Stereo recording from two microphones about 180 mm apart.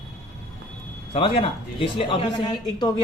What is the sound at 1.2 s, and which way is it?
A woman's voice, 30° left (ahead or behind).